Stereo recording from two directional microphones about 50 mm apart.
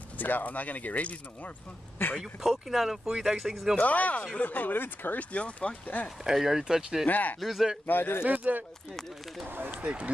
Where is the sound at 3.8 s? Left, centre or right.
Left.